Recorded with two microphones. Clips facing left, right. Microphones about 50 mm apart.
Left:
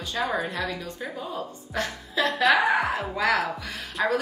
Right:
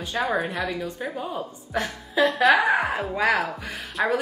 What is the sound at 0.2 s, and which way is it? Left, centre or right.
A woman's voice, centre.